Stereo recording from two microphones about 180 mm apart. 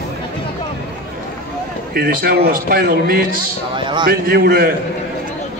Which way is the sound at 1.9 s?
60° right (ahead or behind).